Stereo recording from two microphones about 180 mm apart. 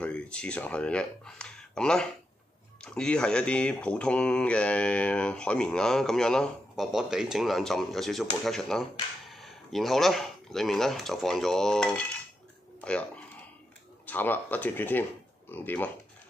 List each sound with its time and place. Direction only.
0.0 s speech: 5° left (ahead or behind)